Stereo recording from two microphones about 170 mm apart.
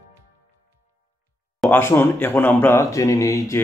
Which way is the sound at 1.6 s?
10° left (ahead or behind).